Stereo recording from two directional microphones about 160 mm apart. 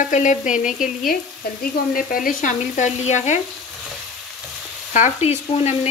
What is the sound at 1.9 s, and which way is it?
Frying, 60° left (ahead or behind).